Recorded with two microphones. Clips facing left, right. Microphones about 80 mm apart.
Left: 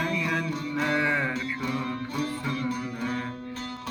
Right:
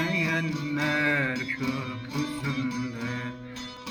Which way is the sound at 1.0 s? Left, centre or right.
Centre.